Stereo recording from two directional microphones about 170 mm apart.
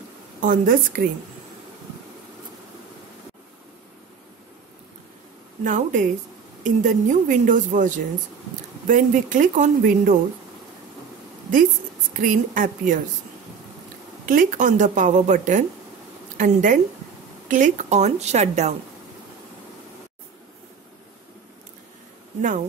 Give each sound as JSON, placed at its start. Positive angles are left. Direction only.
{"t": 0.4, "sound": "a woman's voice", "side_deg": -50}
{"t": 5.6, "sound": "a woman's voice", "side_deg": -50}
{"t": 12.1, "sound": "a woman's voice", "side_deg": -55}
{"t": 14.2, "sound": "a woman's voice", "side_deg": -50}